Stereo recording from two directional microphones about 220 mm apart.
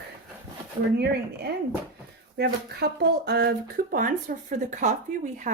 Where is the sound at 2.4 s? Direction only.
45° right (ahead or behind).